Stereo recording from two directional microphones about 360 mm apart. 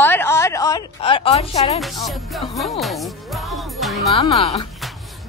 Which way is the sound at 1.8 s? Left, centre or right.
Centre.